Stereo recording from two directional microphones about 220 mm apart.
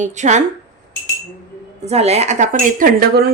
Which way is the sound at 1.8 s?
30° right (ahead or behind).